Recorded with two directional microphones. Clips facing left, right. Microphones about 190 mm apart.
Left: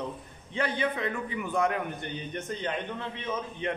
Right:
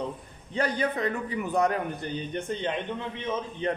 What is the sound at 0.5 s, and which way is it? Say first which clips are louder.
A man's voice: right 2 dB; 40° right (ahead or behind).